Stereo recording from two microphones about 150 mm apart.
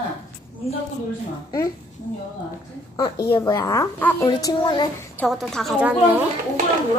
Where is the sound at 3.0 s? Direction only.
30° left (ahead or behind).